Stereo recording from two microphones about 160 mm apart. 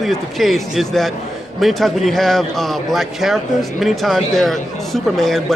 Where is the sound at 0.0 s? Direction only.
Centre (ahead or behind).